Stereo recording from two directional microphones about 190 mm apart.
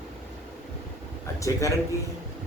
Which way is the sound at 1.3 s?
15° left (ahead or behind).